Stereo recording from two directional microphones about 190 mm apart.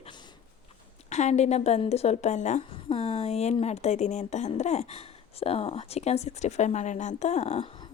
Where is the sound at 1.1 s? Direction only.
35° left (ahead or behind).